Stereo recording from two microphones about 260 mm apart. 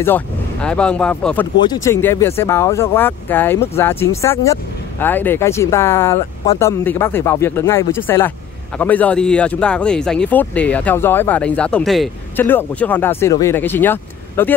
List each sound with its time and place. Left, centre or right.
0.0 s speech: centre